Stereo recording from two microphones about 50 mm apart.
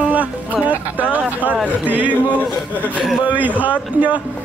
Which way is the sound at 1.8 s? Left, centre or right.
Right.